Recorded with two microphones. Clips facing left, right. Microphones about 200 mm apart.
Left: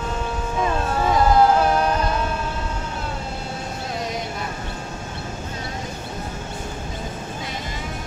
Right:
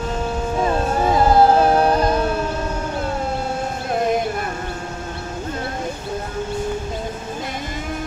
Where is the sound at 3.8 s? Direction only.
55° right (ahead or behind).